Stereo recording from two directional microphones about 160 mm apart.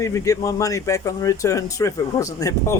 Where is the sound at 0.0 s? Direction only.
20° left (ahead or behind).